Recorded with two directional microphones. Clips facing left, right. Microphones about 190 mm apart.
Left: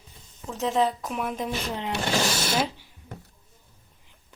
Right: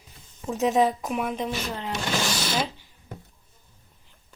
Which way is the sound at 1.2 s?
Centre (ahead or behind).